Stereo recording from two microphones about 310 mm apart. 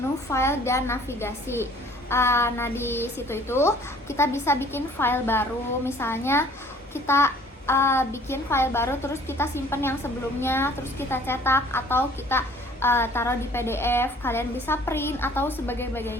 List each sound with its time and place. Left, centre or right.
0.3 s a woman's voice: centre